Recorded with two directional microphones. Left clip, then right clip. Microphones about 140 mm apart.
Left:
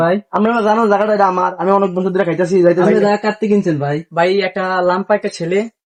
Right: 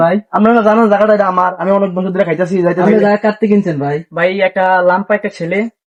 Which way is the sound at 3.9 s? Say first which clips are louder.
Right 1 dB; 30° left (ahead or behind).